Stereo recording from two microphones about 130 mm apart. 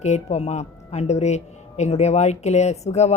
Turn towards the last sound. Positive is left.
turn(degrees=60)  # may be behind; listen again after turning